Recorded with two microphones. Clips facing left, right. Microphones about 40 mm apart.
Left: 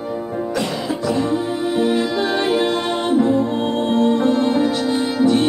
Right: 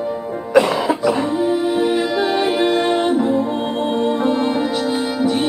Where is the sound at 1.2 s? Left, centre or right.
Centre.